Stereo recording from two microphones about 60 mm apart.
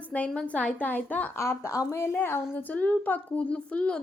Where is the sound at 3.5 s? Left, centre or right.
Centre.